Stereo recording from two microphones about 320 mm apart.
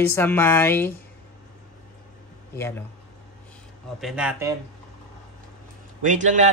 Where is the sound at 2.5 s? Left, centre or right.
Centre.